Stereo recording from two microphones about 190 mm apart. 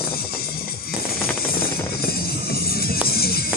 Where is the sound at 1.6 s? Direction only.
55° left (ahead or behind).